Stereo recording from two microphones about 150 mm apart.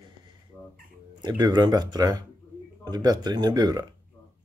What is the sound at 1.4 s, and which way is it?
Speech, 25° right (ahead or behind).